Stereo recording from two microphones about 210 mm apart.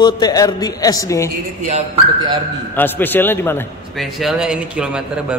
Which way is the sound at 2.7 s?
10° left (ahead or behind).